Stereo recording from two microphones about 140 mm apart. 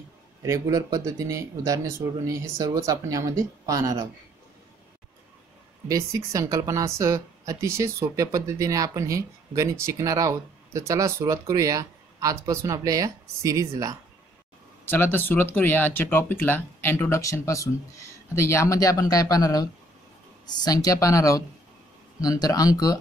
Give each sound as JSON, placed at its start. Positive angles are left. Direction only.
{"t": 0.4, "sound": "speech", "side_deg": -25}
{"t": 5.9, "sound": "speech", "side_deg": -25}
{"t": 14.9, "sound": "speech", "side_deg": 15}